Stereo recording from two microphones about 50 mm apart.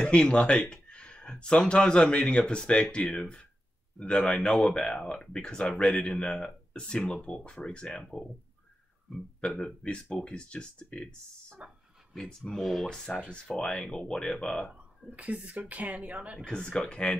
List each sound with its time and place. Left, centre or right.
0.0 s speech: left
4.4 s speech: centre
9.1 s speech: centre
9.8 s speech: left
11.6 s speech: right
12.3 s speech: centre
12.6 s speech: centre
13.5 s speech: centre
15.0 s speech: right
16.4 s speech: centre